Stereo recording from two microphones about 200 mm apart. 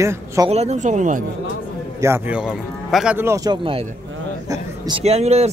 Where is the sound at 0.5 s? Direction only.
35° right (ahead or behind).